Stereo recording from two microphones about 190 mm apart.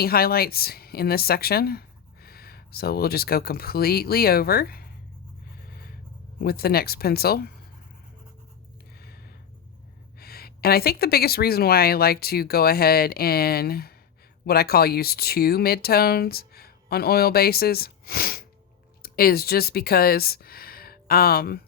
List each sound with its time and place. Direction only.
0.0 s speech: 55° left (ahead or behind)
5.6 s writing: 55° left (ahead or behind)
6.4 s speech: 55° left (ahead or behind)
9.0 s a sound: 55° left (ahead or behind)
10.2 s speech: 55° left (ahead or behind)